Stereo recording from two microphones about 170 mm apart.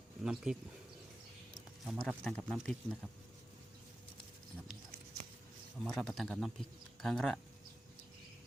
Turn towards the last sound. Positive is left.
turn(degrees=0)  # may be behind; listen again after turning